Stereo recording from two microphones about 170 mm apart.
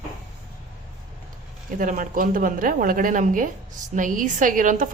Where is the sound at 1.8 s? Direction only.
50° right (ahead or behind).